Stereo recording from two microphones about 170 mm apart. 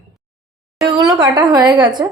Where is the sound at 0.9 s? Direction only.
25° right (ahead or behind).